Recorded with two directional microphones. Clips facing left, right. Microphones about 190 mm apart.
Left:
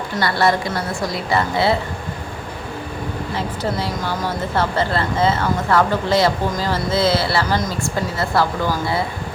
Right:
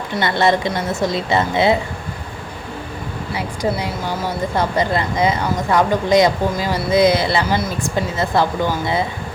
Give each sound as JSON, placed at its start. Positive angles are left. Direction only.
{"t": 0.2, "sound": "a woman's voice", "side_deg": -20}
{"t": 3.3, "sound": "a woman's voice", "side_deg": -15}